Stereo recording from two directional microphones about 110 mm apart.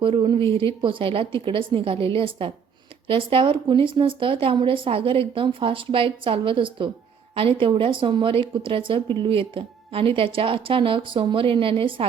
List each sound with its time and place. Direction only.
0.0 s speech: 50° right (ahead or behind)